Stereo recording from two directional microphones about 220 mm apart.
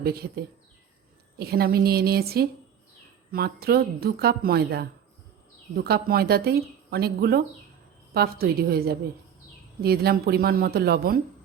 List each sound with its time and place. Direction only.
0.0 s a woman's voice: 45° right (ahead or behind)